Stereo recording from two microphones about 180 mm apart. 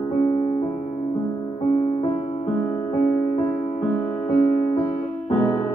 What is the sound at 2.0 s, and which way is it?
Music, 35° left (ahead or behind).